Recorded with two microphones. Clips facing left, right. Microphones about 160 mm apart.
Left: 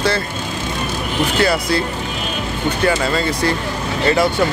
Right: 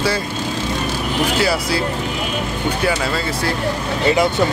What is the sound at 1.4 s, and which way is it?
Speech, 5° right (ahead or behind).